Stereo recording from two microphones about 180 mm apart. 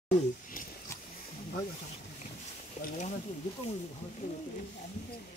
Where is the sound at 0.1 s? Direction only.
50° left (ahead or behind).